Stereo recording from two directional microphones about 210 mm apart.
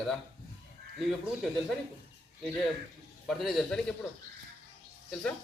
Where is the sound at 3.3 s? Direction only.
Centre (ahead or behind).